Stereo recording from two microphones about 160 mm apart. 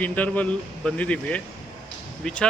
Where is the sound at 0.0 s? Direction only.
10° left (ahead or behind).